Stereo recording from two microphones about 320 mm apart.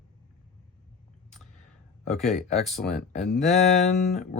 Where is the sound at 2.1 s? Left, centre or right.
Centre.